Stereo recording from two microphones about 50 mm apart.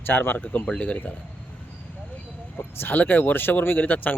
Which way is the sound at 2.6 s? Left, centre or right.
Left.